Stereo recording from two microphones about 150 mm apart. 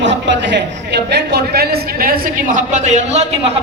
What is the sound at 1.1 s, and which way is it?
A man's voice, 90° right.